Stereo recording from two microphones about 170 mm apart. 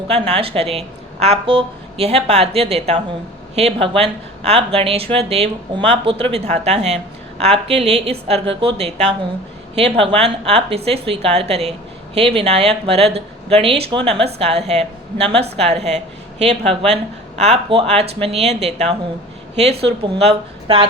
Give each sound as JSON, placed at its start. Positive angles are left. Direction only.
{"t": 0.1, "sound": "a woman's voice", "side_deg": -35}